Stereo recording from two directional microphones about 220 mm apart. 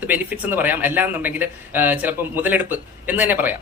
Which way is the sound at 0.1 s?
10° right (ahead or behind).